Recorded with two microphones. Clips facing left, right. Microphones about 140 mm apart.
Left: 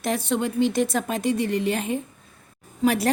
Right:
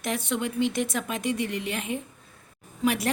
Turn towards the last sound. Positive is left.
turn(degrees=35)  # may be behind; listen again after turning